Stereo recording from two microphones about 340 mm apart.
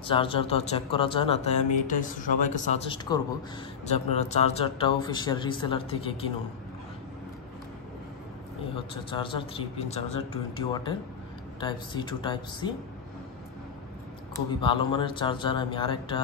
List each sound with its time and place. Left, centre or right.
0.0 s a man's voice: centre
8.7 s a man's voice: centre
11.6 s a man's voice: centre
14.3 s a man's voice: centre